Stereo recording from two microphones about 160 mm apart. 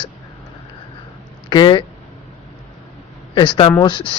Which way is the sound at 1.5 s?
30° left (ahead or behind).